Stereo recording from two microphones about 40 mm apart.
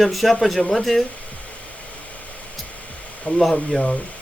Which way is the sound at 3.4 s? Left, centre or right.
Centre.